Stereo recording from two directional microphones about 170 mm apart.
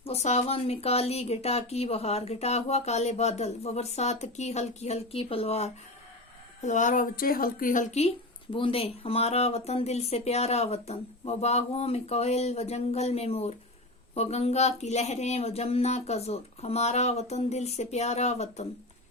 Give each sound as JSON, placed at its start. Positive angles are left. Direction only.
{"t": 0.0, "sound": "speech", "side_deg": 40}
{"t": 8.5, "sound": "speech", "side_deg": 30}